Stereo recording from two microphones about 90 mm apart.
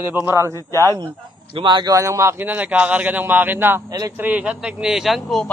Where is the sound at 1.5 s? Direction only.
65° right (ahead or behind).